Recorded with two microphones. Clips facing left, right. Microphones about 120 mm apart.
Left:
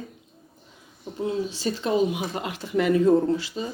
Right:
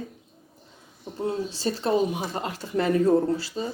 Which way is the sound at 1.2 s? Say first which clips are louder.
Left 1 dB; 40° right (ahead or behind).